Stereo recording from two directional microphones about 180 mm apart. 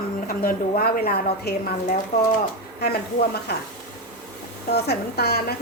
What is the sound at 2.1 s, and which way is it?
Speech, 40° left (ahead or behind).